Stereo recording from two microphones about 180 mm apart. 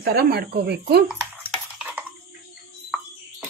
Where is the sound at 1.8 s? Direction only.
10° right (ahead or behind).